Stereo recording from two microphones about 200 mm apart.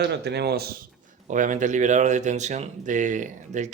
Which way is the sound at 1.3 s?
40° right (ahead or behind).